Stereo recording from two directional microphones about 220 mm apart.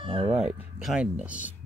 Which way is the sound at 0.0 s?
25° right (ahead or behind).